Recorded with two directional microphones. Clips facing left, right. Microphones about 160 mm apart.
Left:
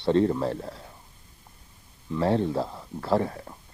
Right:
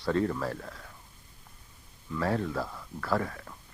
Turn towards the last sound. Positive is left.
turn(degrees=30)  # may be behind; listen again after turning